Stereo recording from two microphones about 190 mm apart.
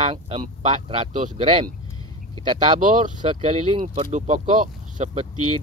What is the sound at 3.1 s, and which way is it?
Speech, 25° right (ahead or behind).